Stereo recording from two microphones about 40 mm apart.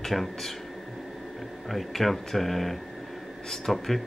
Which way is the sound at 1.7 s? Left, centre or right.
Centre.